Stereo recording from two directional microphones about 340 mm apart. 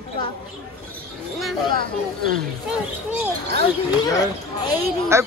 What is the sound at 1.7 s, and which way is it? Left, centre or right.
Speech, right.